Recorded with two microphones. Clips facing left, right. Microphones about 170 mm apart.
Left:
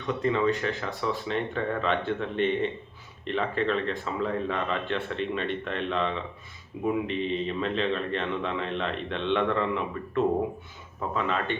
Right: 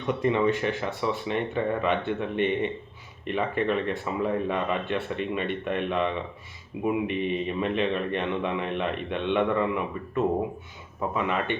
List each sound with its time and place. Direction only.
0.1 s a man's voice: 15° right (ahead or behind)